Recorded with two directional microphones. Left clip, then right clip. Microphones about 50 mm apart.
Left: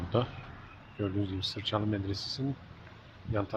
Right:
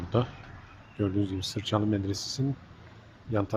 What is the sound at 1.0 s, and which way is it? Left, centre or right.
Speech, right.